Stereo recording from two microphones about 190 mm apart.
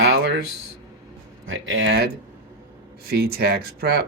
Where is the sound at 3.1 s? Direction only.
55° right (ahead or behind).